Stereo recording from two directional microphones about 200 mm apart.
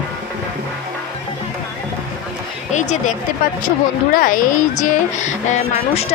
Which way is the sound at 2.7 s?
35° left (ahead or behind).